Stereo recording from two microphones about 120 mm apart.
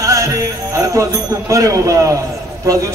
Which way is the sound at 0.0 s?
25° right (ahead or behind).